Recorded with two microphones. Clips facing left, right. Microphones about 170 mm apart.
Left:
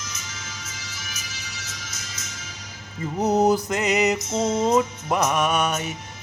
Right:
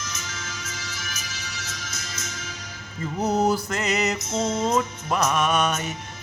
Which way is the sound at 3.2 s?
20° left (ahead or behind).